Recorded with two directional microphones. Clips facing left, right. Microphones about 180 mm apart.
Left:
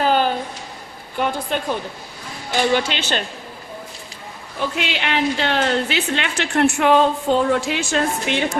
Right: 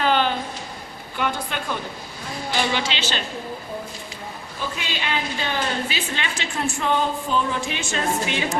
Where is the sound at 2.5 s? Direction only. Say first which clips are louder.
Left 6 dB; 45° left (ahead or behind).